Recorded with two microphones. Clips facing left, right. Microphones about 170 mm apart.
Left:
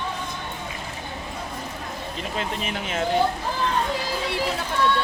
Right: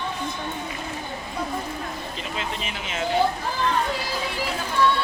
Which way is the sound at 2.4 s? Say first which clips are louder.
Left 3 dB; 50° left (ahead or behind).